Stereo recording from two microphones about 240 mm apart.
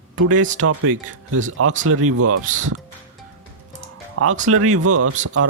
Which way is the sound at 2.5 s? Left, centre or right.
Right.